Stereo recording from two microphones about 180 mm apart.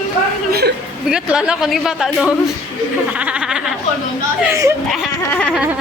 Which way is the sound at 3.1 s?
5° right (ahead or behind).